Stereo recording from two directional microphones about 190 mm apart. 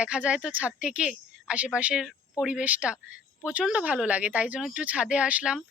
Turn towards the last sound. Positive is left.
turn(degrees=-5)  # may be behind; listen again after turning